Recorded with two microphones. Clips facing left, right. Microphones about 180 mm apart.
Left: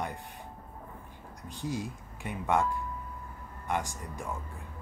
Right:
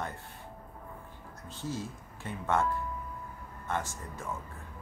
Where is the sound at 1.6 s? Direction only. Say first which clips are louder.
Left 2 dB; 15° left (ahead or behind).